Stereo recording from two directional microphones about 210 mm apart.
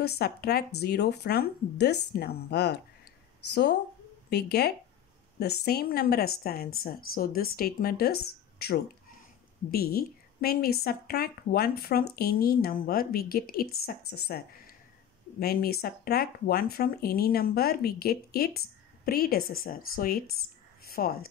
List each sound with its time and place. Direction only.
0.0 s speech: 50° left (ahead or behind)
4.3 s speech: 50° left (ahead or behind)